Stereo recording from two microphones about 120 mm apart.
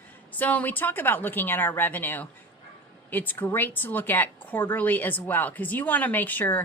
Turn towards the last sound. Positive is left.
turn(degrees=15)  # may be behind; listen again after turning